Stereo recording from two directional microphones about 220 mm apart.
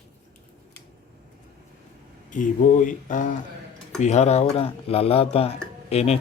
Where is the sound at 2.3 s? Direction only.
35° left (ahead or behind).